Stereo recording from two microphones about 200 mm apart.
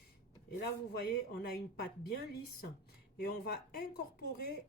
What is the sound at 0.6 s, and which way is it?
Speech, 50° left (ahead or behind).